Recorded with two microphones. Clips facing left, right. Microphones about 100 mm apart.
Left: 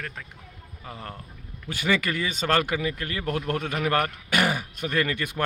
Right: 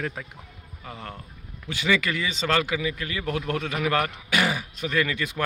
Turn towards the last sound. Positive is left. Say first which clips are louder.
# right 1 dB
turn(degrees=50)  # may be behind; listen again after turning